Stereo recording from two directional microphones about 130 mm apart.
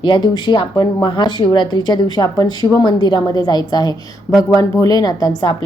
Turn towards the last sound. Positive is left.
turn(degrees=30)  # may be behind; listen again after turning